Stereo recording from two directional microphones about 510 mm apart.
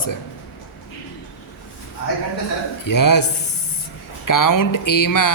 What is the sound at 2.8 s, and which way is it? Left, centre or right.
A man's voice, left.